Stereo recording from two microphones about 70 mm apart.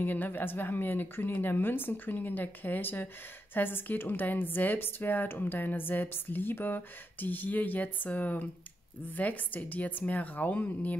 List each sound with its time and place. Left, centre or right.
0.0 s a woman's voice: left